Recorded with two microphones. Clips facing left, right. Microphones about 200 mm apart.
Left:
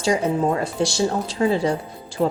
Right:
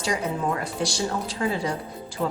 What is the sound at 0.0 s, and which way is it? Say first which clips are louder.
A woman's voice: left 6 dB; 25° left (ahead or behind).